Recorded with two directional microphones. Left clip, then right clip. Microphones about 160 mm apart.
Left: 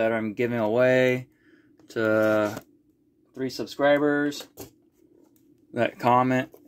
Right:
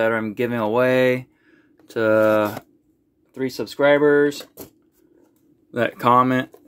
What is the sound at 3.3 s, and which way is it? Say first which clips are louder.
Speech: right 5 dB; 40° right (ahead or behind).